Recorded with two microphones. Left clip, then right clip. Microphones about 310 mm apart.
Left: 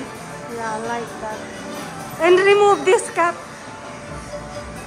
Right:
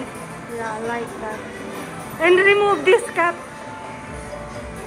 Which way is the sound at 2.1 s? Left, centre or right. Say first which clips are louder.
Left 1 dB; centre.